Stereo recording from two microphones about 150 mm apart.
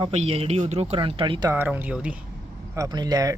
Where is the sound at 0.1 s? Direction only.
45° right (ahead or behind).